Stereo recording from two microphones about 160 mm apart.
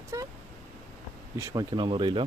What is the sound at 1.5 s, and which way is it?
Speech, 30° right (ahead or behind).